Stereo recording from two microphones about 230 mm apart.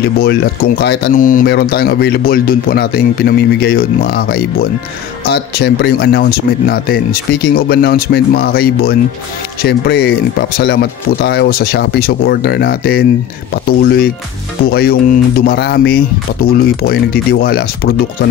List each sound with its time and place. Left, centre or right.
0.0 s speech: left